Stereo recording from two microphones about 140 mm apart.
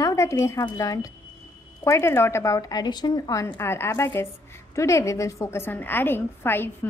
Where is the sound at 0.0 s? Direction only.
20° left (ahead or behind).